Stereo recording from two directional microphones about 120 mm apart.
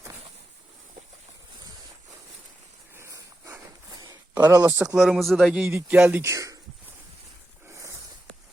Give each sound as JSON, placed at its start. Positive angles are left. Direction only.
{"t": 2.9, "sound": "dog", "side_deg": -25}
{"t": 3.8, "sound": "a sound", "side_deg": -35}
{"t": 4.5, "sound": "speech", "side_deg": -20}
{"t": 4.9, "sound": "speech", "side_deg": 0}
{"t": 5.6, "sound": "speech", "side_deg": -15}
{"t": 6.3, "sound": "speech", "side_deg": -25}
{"t": 7.7, "sound": "a sound", "side_deg": -25}